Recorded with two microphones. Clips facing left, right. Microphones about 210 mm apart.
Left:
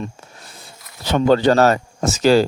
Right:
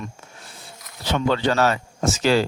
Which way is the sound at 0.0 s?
40° left (ahead or behind).